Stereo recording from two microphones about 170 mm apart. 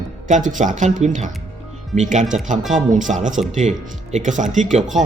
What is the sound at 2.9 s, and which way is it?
Speech, 50° right (ahead or behind).